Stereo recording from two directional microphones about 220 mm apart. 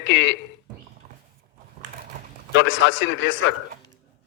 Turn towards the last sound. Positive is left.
turn(degrees=60)  # may be behind; listen again after turning